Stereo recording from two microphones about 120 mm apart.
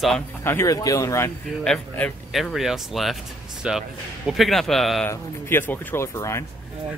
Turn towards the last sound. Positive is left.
turn(degrees=25)  # may be behind; listen again after turning